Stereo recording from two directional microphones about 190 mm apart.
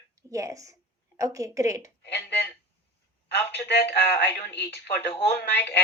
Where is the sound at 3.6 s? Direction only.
60° left (ahead or behind).